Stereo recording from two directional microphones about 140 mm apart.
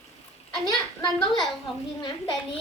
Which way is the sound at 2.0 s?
30° left (ahead or behind).